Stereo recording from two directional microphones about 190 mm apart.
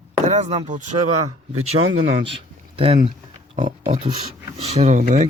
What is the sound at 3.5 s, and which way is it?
Speech, 40° right (ahead or behind).